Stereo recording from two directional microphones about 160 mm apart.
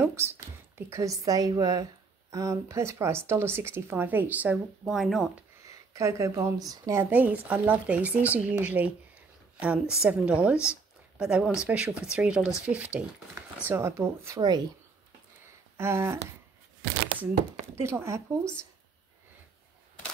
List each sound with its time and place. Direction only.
0.0 s a woman's voice: 15° right (ahead or behind)
5.7 s a woman's voice: 20° right (ahead or behind)
10.7 s a sound: 5° right (ahead or behind)
11.6 s a woman's voice: 5° right (ahead or behind)
15.8 s a woman's voice: 15° right (ahead or behind)
17.7 s a woman's voice: 15° right (ahead or behind)